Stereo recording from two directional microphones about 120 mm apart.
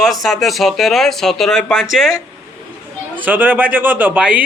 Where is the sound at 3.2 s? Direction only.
15° right (ahead or behind).